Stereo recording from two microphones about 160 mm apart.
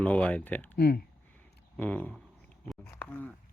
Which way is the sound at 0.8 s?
90° left.